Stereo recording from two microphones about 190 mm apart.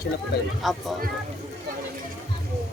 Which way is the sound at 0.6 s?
Centre (ahead or behind).